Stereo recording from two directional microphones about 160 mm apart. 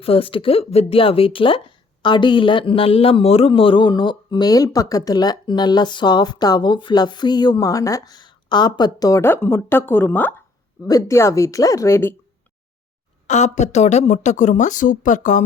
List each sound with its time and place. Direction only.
0.0 s speech: 35° left (ahead or behind); by 12.1 s 15° left (ahead or behind)
13.2 s speech: 45° left (ahead or behind)